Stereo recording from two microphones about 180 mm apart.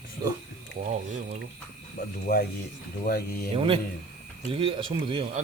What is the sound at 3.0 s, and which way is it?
Speech, 55° left (ahead or behind).